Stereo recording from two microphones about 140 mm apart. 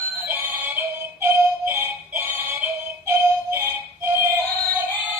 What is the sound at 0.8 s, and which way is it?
Music, 15° right (ahead or behind).